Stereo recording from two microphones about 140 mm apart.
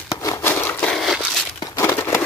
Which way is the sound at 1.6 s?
25° left (ahead or behind).